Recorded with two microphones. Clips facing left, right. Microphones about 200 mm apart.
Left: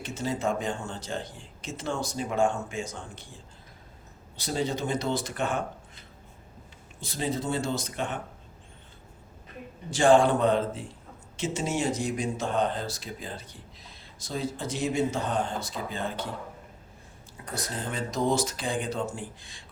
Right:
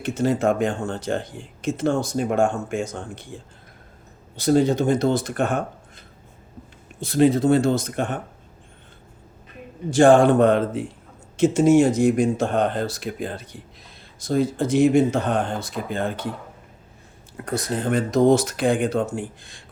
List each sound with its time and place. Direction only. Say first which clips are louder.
0.0 s speech: right 9 dB; 55° right (ahead or behind)
7.1 s speech: right 13 dB; 70° right (ahead or behind); by 8.2 s 50° right (ahead or behind)
9.9 s speech: right 6 dB; 50° right (ahead or behind)
11.3 s speech: right 14 dB; 50° right (ahead or behind)
17.7 s speech: right 12 dB; 65° right (ahead or behind)